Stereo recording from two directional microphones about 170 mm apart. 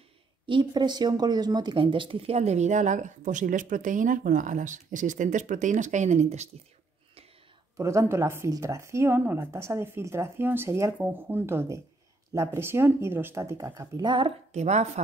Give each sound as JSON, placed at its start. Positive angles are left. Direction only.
{"t": 0.5, "sound": "speech", "side_deg": -25}
{"t": 7.7, "sound": "speech", "side_deg": -20}
{"t": 14.5, "sound": "a woman's voice", "side_deg": -40}